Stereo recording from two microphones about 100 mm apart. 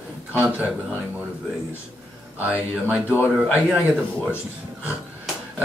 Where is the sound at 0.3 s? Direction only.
20° right (ahead or behind).